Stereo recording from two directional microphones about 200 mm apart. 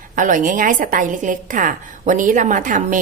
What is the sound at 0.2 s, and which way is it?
A woman's voice, 40° right (ahead or behind).